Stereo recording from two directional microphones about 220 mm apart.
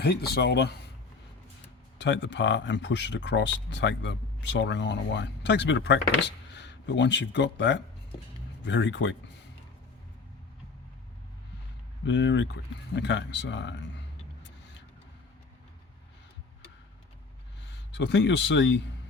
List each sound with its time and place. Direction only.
0.0 s speech: 45° left (ahead or behind)
2.0 s speech: 55° left (ahead or behind)
12.0 s speech: 55° left (ahead or behind)
17.9 s speech: 55° left (ahead or behind)